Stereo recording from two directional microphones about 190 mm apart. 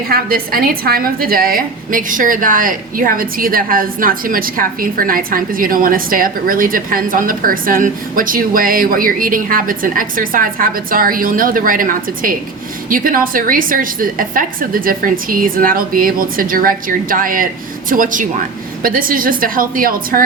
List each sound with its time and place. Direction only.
0.1 s a woman's voice: 50° right (ahead or behind)